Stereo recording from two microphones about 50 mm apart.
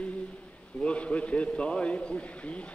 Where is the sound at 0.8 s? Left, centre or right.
Left.